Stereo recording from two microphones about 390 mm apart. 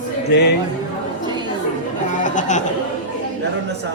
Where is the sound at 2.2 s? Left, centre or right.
Centre.